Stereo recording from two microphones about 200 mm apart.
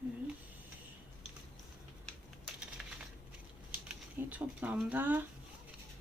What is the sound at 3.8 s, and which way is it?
Speech, 10° right (ahead or behind).